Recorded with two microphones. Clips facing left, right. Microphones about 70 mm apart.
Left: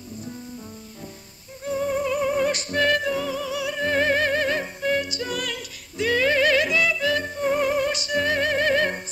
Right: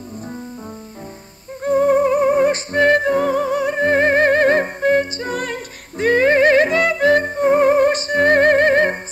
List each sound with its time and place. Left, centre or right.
1.6 s music: right